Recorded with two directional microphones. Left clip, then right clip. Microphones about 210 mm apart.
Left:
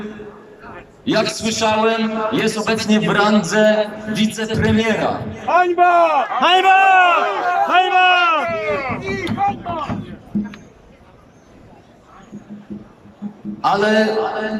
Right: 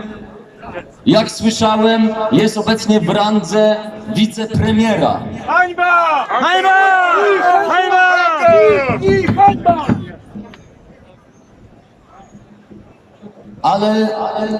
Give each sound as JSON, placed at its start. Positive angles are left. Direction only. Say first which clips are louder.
{"t": 1.0, "sound": "a man's voice", "louder": "right 5 dB", "side_deg": -20}
{"t": 5.5, "sound": "a man's voice", "louder": "right 1 dB", "side_deg": 15}
{"t": 6.4, "sound": "a man's voice", "louder": "even", "side_deg": 5}
{"t": 7.7, "sound": "a sound", "louder": "right 2 dB", "side_deg": 5}
{"t": 8.4, "sound": "speech", "louder": "right 12 dB", "side_deg": -50}
{"t": 13.6, "sound": "a man's voice", "louder": "right 1 dB", "side_deg": -20}